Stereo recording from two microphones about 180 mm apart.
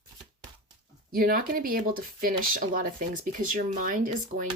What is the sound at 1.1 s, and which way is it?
Speech, 55° right (ahead or behind).